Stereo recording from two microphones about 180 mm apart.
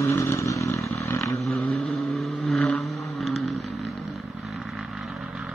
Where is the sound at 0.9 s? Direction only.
15° left (ahead or behind).